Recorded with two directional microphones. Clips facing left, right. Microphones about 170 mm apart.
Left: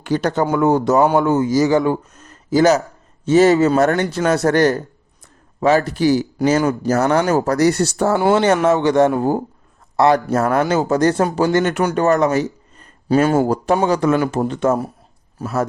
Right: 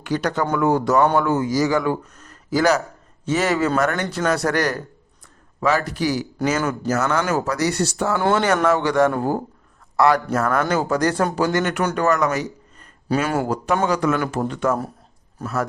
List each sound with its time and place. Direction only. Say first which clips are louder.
0.0 s speech: left 4 dB; 25° left (ahead or behind)
8.2 s speech: left 3 dB; 20° left (ahead or behind)
15.4 s a man's voice: left 3 dB; 10° left (ahead or behind)